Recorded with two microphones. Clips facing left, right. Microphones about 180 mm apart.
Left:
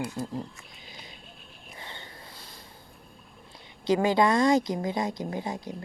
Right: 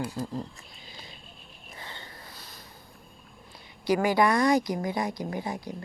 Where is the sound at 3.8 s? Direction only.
20° left (ahead or behind).